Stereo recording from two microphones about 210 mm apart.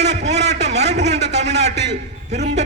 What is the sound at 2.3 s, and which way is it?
Speech, 35° right (ahead or behind).